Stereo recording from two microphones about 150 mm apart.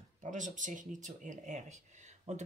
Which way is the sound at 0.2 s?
55° right (ahead or behind).